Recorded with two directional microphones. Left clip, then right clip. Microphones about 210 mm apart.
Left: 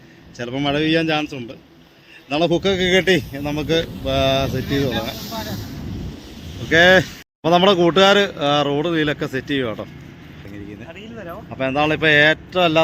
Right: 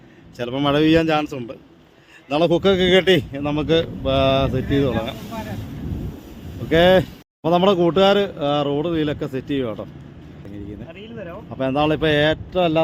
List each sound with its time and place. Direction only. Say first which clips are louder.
0.3 s a man's voice: right 2 dB; 20° right (ahead or behind)
6.7 s a man's voice: left 2 dB; 5° right (ahead or behind)
11.5 s a man's voice: left 1 dB; 20° right (ahead or behind)